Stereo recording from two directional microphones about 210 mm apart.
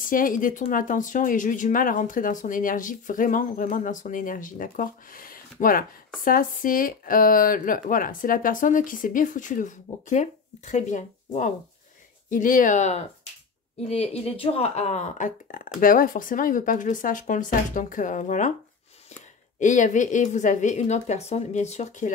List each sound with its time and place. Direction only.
0.0 s speech: 40° left (ahead or behind)
19.6 s speech: 35° left (ahead or behind)